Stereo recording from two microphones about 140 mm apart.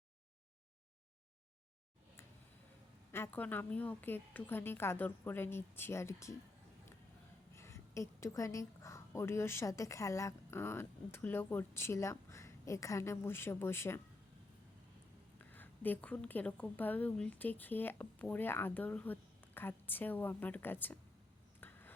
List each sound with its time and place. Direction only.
3.1 s a woman's voice: 15° left (ahead or behind)
7.5 s a woman's voice: 20° left (ahead or behind)
15.5 s a woman's voice: 15° left (ahead or behind)
21.6 s a sound: 15° left (ahead or behind)